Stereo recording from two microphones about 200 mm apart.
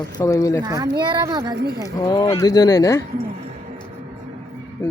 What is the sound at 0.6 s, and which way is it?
Speech, 20° right (ahead or behind).